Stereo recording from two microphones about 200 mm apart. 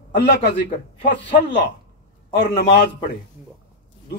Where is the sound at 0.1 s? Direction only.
55° left (ahead or behind).